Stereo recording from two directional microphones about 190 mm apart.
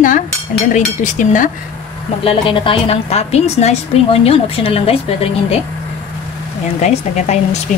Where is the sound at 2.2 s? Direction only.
30° left (ahead or behind).